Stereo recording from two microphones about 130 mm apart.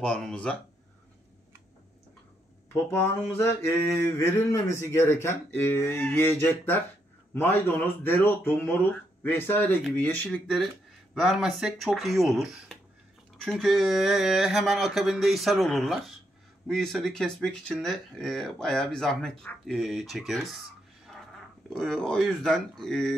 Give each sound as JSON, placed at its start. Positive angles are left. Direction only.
{"t": 0.0, "sound": "speech", "side_deg": 5}
{"t": 2.7, "sound": "mantra", "side_deg": 15}
{"t": 11.1, "sound": "speech", "side_deg": 0}
{"t": 21.6, "sound": "speech", "side_deg": 5}